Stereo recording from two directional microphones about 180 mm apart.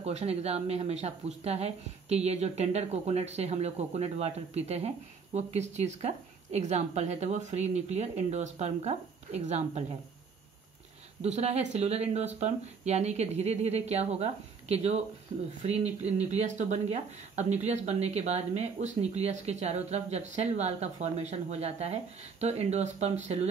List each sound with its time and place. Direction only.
0.0 s speech: 35° right (ahead or behind)
11.2 s speech: 35° right (ahead or behind)